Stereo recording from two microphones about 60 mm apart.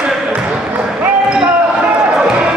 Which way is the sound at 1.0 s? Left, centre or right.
Right.